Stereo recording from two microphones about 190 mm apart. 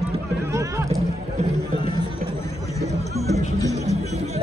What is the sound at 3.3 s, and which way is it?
Music, 15° left (ahead or behind).